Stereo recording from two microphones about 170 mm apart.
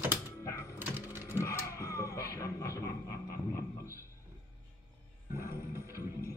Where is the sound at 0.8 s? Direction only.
10° right (ahead or behind).